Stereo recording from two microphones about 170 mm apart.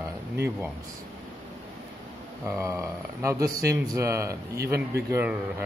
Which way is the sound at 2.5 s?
20° right (ahead or behind).